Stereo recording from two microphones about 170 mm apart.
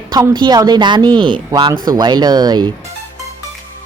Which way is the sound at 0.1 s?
25° right (ahead or behind).